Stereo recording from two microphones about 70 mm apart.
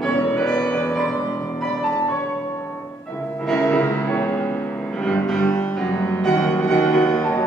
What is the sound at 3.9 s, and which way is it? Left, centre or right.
Music, left.